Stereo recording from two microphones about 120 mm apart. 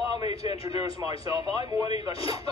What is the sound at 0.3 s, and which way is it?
Speech, 55° left (ahead or behind).